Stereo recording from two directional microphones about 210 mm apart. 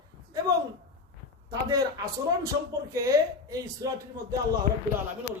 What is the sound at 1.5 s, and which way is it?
A woman's voice, 20° right (ahead or behind).